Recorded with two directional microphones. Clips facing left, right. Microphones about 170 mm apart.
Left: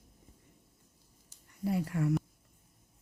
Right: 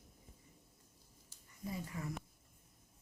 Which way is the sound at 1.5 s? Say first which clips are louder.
Left 11 dB; 75° left (ahead or behind).